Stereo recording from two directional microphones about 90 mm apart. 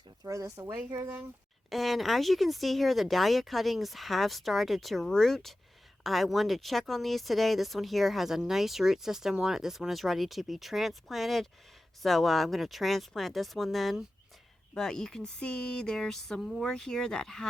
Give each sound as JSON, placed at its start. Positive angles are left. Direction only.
{"t": 0.3, "sound": "speech", "side_deg": -35}
{"t": 1.7, "sound": "speech", "side_deg": 0}